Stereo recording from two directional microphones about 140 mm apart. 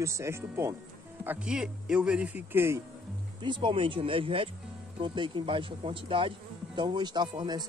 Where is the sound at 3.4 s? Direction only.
35° right (ahead or behind).